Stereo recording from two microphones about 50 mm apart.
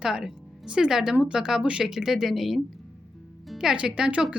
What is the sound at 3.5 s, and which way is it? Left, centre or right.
Speech, centre.